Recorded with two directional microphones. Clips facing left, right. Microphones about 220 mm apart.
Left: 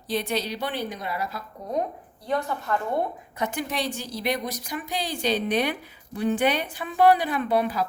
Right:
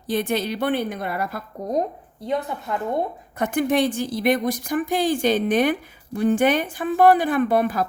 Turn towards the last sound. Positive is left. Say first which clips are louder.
# right 4 dB
turn(degrees=-50)  # may be behind; listen again after turning